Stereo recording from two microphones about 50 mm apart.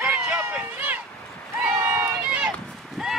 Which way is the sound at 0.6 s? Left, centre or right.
Right.